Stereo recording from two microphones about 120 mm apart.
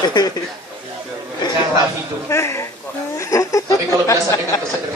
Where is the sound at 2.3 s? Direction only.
25° left (ahead or behind).